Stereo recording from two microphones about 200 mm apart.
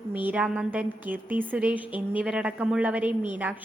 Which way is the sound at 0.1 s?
10° right (ahead or behind).